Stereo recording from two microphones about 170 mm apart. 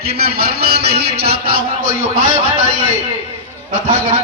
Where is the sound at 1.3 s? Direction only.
35° right (ahead or behind).